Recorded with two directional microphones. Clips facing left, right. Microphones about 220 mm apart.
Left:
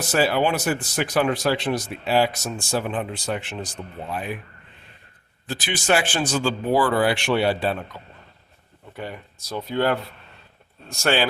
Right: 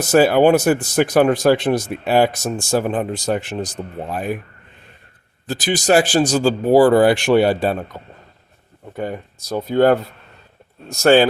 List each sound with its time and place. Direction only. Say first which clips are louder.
0.0 s speech: right 8 dB; 50° right (ahead or behind)
5.5 s speech: right 6 dB; 40° right (ahead or behind)